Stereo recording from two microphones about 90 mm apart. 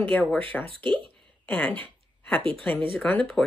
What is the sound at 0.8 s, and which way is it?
Speech, 60° right (ahead or behind).